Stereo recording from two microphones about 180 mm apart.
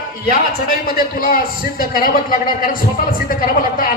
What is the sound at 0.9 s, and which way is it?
A man's voice, 55° left (ahead or behind).